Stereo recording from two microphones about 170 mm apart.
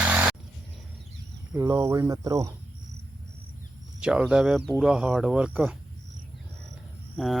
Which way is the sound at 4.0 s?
5° right (ahead or behind).